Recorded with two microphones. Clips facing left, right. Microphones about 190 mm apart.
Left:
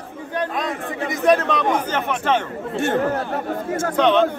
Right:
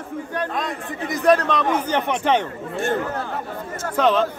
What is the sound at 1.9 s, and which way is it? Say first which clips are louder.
Speech: right 1 dB; 15° right (ahead or behind).